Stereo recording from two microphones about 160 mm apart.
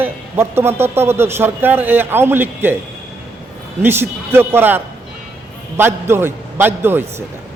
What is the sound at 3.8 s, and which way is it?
A man's voice, 15° right (ahead or behind).